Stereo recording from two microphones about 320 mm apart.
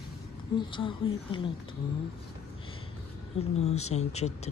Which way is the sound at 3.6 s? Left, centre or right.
Centre.